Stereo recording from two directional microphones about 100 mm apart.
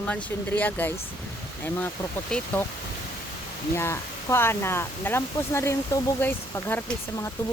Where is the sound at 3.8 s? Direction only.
25° left (ahead or behind).